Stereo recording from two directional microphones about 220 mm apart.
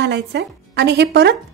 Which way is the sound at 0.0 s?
50° right (ahead or behind).